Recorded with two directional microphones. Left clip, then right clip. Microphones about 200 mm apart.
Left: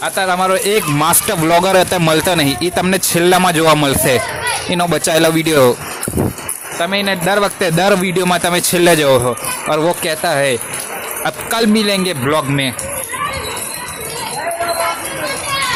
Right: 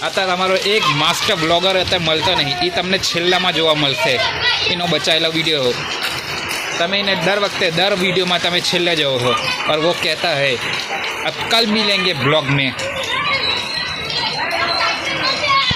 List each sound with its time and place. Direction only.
0.0 s speech: 25° left (ahead or behind)
0.6 s speech: 55° left (ahead or behind)
6.7 s speech: 25° left (ahead or behind)
7.3 s speech: 55° left (ahead or behind)
9.6 s speech: 50° left (ahead or behind)
11.5 s speech: 60° left (ahead or behind)